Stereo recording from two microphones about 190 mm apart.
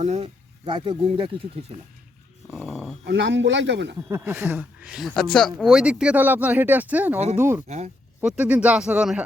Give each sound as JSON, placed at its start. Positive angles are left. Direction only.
{"t": 0.0, "sound": "speech", "side_deg": -35}
{"t": 2.5, "sound": "dog", "side_deg": 0}
{"t": 3.1, "sound": "a man's voice", "side_deg": -70}
{"t": 4.1, "sound": "speech", "side_deg": -10}